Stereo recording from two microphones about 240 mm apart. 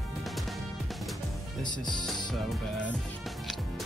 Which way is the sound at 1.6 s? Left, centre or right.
Centre.